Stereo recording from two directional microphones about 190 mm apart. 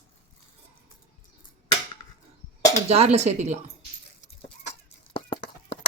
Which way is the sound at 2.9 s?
35° right (ahead or behind).